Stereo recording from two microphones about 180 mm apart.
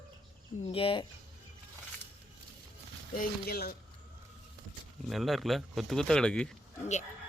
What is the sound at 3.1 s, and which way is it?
Speech, 55° left (ahead or behind).